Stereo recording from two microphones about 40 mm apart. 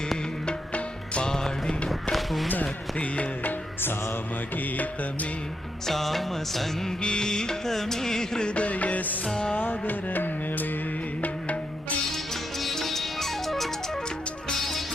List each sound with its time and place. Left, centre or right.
0.7 s music: left
1.3 s music: centre
2.1 s a sound: centre
4.5 s music: left
5.8 s music: centre
7.0 s music: left
8.4 s music: left
9.2 s music: centre
9.6 s music: left
12.1 s music: centre